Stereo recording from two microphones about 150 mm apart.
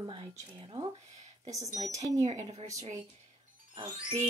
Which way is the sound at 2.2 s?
50° right (ahead or behind).